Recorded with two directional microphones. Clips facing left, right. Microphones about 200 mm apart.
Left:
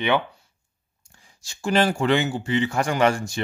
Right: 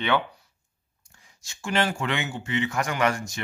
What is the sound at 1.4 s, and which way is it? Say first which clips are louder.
Speech: left 5 dB; 35° left (ahead or behind).